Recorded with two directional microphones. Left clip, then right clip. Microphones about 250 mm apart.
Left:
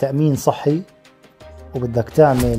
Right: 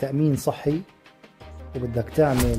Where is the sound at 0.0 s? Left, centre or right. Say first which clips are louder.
Left 6 dB; centre.